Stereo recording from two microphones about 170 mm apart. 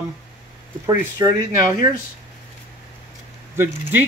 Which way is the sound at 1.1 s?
20° right (ahead or behind).